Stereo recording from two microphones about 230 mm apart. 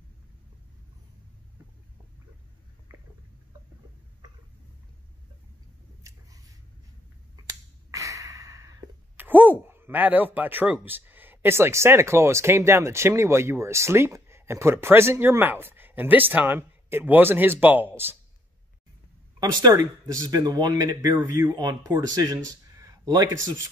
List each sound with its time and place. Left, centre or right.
6.0 s scissors: centre
7.9 s speech: centre
19.4 s speech: centre